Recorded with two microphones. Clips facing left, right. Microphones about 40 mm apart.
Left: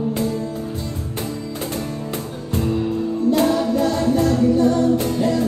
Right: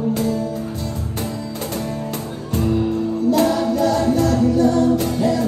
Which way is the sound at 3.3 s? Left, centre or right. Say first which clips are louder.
Even; left.